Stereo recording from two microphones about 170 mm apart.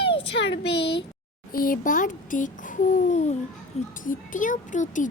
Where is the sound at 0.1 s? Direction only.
90° left.